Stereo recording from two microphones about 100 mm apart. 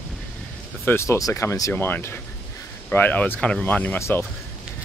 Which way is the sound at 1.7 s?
20° left (ahead or behind).